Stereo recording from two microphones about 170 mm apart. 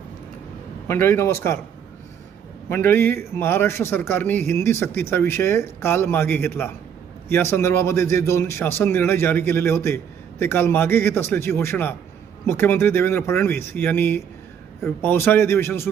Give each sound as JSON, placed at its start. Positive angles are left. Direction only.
{"t": 0.9, "sound": "a man's voice", "side_deg": 15}
{"t": 2.6, "sound": "a man's voice", "side_deg": 15}